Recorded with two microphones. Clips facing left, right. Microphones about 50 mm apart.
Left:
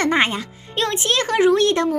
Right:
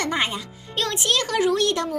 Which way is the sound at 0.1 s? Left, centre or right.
Left.